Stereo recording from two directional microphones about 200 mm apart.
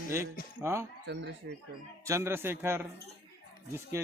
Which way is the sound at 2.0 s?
15° right (ahead or behind).